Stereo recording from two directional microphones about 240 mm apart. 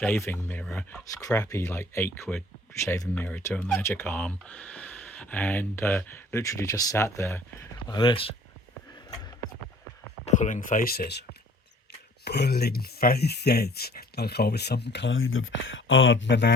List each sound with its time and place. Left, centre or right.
0.0 s speech: centre
10.2 s speech: left